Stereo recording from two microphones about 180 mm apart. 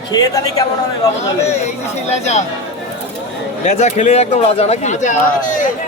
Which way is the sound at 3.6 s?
40° left (ahead or behind).